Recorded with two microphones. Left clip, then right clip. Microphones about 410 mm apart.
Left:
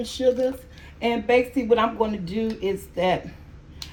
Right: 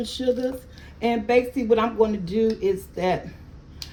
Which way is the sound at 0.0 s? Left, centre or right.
Centre.